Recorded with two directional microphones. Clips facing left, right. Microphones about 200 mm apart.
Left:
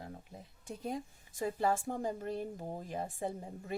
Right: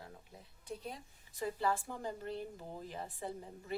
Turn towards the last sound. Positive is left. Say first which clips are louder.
# left 5 dB
turn(degrees=45)  # may be behind; listen again after turning